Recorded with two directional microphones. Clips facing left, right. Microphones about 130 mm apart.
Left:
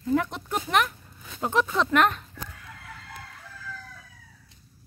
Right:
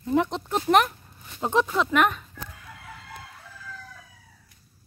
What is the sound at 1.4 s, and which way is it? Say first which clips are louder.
Speech: right 2 dB; 20° right (ahead or behind).